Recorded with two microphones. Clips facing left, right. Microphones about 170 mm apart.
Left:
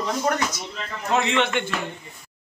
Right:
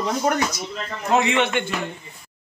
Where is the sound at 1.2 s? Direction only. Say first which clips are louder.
Right 2 dB; 10° right (ahead or behind).